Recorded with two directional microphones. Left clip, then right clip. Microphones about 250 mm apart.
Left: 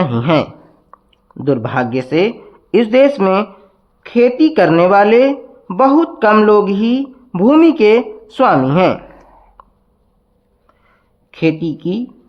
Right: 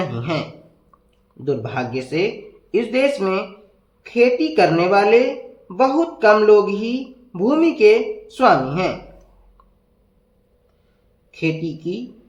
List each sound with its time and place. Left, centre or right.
0.0 s speech: left
0.9 s a sound: left
1.5 s speech: left
11.3 s speech: left